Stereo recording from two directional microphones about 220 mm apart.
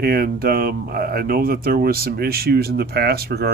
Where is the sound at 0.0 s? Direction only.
45° right (ahead or behind).